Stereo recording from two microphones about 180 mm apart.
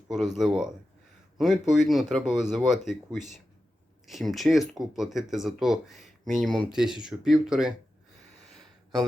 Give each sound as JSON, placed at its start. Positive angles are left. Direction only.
{"t": 0.3, "sound": "speech", "side_deg": 0}